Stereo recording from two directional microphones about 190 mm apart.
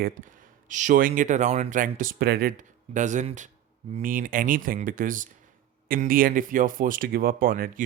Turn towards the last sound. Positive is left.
turn(degrees=-50)  # may be behind; listen again after turning